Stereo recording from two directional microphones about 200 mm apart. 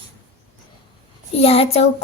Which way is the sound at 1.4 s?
30° left (ahead or behind).